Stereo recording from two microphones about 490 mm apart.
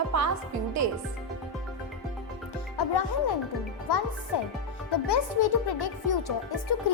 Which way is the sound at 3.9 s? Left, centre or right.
Left.